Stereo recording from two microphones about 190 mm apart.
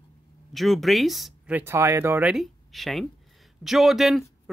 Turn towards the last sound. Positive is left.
turn(degrees=0)  # may be behind; listen again after turning